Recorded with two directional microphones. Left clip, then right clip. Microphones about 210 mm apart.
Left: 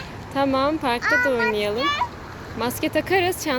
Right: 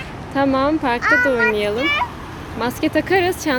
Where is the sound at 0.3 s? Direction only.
5° left (ahead or behind).